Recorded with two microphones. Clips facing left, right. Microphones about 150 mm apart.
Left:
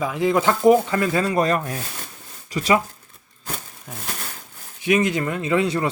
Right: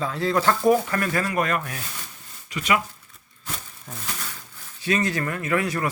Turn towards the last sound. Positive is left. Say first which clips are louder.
# left 4 dB
turn(degrees=25)  # may be behind; listen again after turning